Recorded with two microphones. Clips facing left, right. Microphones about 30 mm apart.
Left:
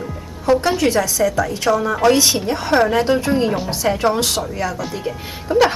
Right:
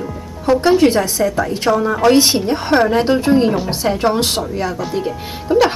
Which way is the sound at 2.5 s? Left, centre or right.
Centre.